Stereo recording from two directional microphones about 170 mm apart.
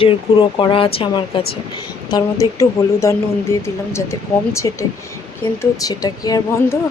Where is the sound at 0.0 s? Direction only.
30° left (ahead or behind).